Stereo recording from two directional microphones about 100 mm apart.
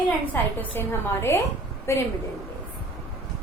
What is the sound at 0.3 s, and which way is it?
A woman's voice, 20° left (ahead or behind).